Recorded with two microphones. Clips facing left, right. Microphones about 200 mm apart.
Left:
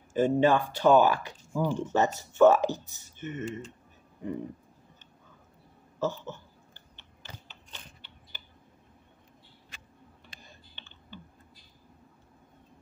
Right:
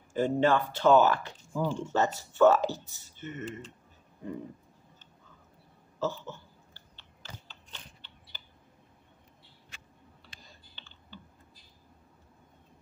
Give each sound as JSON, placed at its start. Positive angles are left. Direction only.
{"t": 0.1, "sound": "speech", "side_deg": 15}
{"t": 5.9, "sound": "typing", "side_deg": 15}